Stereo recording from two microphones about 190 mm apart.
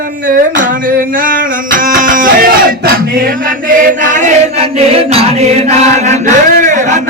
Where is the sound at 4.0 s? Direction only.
40° right (ahead or behind).